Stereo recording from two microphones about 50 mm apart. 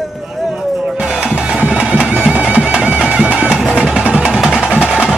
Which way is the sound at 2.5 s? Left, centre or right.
Right.